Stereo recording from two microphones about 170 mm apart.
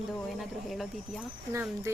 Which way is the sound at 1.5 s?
15° right (ahead or behind).